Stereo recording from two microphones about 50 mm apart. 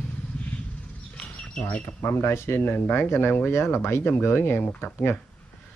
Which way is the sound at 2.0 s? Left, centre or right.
Left.